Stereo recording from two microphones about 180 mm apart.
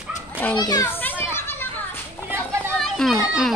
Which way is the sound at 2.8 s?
Centre (ahead or behind).